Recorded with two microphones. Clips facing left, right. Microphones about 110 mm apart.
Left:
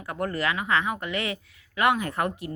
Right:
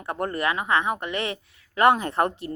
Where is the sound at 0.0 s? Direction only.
30° right (ahead or behind).